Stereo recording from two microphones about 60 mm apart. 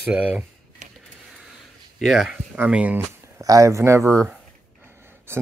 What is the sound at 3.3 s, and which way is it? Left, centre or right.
Speech, right.